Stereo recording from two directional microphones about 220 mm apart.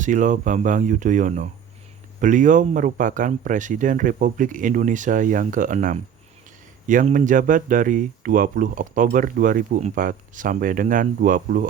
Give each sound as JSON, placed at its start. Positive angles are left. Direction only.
{"t": 0.0, "sound": "speech", "side_deg": -35}